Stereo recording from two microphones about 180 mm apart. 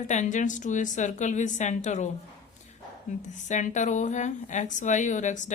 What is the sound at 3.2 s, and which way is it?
Speech, 40° left (ahead or behind).